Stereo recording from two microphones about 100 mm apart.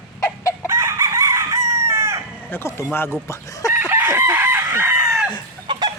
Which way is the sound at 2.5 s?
25° left (ahead or behind).